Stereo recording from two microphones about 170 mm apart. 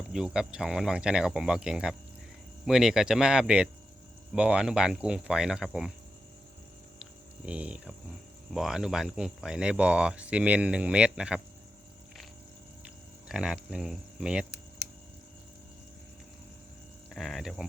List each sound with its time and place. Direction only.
0.1 s speech: 5° right (ahead or behind)
7.0 s a sound: 5° right (ahead or behind)
8.5 s speech: 5° right (ahead or behind)
13.2 s speech: 5° right (ahead or behind)
17.2 s speech: centre (ahead or behind)